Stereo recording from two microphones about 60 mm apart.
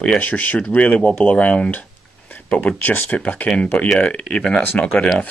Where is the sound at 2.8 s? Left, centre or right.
Left; by 4.6 s centre.